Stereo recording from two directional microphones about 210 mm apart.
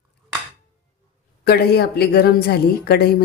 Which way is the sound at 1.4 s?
50° left (ahead or behind).